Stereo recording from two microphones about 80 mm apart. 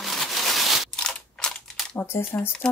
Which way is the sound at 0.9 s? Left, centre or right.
Centre.